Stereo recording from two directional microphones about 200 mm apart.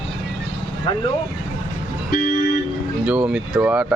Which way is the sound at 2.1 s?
50° left (ahead or behind).